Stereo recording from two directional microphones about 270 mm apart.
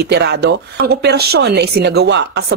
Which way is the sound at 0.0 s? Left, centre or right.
Right.